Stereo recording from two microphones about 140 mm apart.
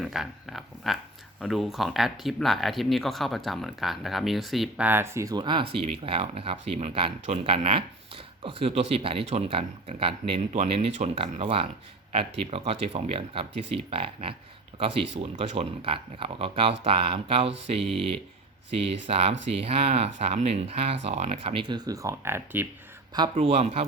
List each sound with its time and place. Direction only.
0.0 s a sound: centre (ahead or behind)
1.4 s speech: centre (ahead or behind)
4.9 s speech: 20° right (ahead or behind); by 10.4 s 45° right (ahead or behind)
10.5 s speech: 55° right (ahead or behind)
17.7 s speech: centre (ahead or behind)
18.7 s speech: 45° right (ahead or behind); by 22.6 s 20° right (ahead or behind)
23.3 s speech: 50° right (ahead or behind)